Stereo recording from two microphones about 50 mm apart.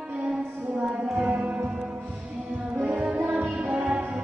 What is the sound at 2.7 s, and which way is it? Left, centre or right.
Music, right.